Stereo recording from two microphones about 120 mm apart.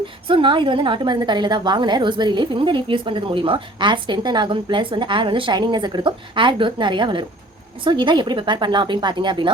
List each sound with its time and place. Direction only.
0.3 s a woman's voice: 45° right (ahead or behind)